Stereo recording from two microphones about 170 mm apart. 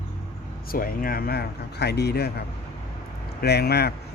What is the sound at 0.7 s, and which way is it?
Speech, 55° left (ahead or behind).